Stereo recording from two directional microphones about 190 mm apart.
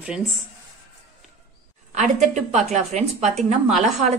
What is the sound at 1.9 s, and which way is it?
A woman's voice, 40° right (ahead or behind).